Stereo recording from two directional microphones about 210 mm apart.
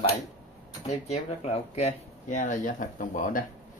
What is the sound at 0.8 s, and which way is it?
Speech, 30° left (ahead or behind).